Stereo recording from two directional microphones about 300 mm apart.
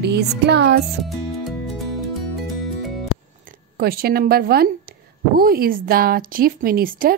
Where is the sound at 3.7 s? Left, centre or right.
Right.